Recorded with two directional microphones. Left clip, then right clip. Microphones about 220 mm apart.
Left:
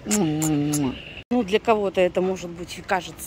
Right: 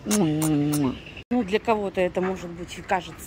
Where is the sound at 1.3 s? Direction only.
15° left (ahead or behind).